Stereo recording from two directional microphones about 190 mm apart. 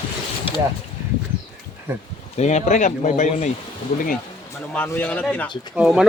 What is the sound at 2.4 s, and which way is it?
Speech, 35° left (ahead or behind).